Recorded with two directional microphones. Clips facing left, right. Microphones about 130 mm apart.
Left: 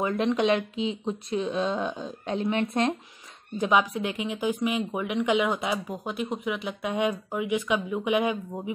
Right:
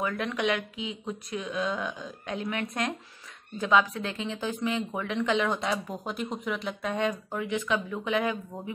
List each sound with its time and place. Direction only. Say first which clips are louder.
0.0 s speech: left 5 dB; 25° left (ahead or behind)